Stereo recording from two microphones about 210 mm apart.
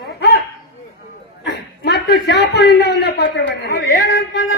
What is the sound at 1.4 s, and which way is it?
A man's voice, 50° left (ahead or behind).